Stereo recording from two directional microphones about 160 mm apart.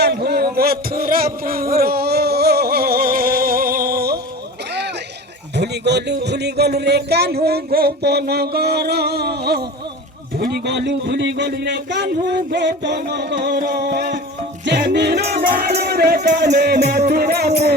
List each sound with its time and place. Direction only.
0.0 s a sound: 90° right; by 4.2 s 70° right (ahead or behind)
5.5 s speech: 90° right
14.6 s music: 90° right